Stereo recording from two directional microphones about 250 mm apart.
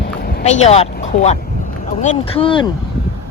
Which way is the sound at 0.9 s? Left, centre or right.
Left.